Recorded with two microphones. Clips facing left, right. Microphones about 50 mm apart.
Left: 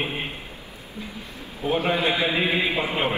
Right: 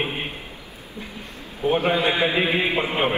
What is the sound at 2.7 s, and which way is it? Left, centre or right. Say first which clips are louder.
Speech: right 2 dB; centre.